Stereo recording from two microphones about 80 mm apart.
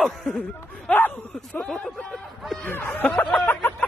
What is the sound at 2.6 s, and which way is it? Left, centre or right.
Speech, left.